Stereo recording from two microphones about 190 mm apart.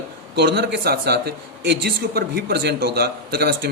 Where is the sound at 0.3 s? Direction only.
60° right (ahead or behind).